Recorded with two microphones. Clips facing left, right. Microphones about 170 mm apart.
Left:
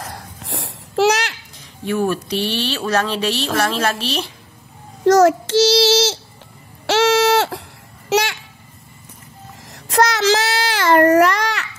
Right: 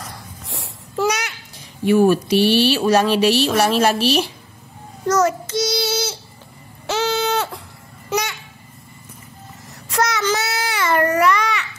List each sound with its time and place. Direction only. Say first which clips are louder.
0.0 s babbling: left 3 dB; 90° left
1.9 s speech: right 6 dB; 10° right (ahead or behind)
5.0 s child singing: left 6 dB; 70° left (ahead or behind)
6.9 s a sound: left 6 dB; 80° left
8.1 s babbling: left 5 dB; 75° left (ahead or behind)
10.2 s baby cry: left 4 dB; 80° left